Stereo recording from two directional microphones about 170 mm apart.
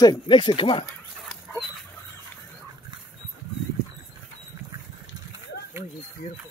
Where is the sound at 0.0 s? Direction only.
25° left (ahead or behind).